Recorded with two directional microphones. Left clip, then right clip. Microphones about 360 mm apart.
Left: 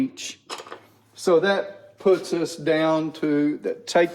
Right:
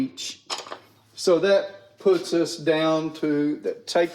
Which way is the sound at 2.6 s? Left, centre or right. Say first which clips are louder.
Left 3 dB; centre.